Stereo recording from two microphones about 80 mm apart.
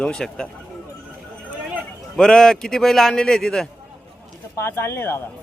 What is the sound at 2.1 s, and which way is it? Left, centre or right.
A man's voice, centre.